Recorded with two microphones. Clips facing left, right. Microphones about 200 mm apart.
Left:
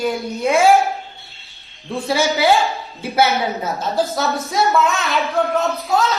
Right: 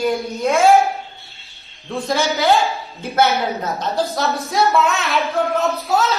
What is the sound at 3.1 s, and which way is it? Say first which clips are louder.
A woman's voice: even; 5° left (ahead or behind).